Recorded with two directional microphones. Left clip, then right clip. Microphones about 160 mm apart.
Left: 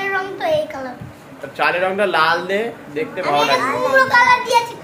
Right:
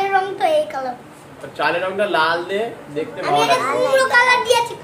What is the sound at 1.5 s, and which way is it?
Speech, 40° left (ahead or behind).